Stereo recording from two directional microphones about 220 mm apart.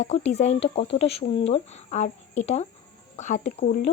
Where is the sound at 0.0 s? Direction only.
30° left (ahead or behind).